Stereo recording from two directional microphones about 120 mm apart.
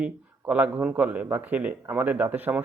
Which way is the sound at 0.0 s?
10° right (ahead or behind).